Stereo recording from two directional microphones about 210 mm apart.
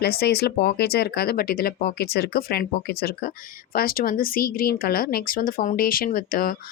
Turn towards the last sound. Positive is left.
turn(degrees=40)  # may be behind; listen again after turning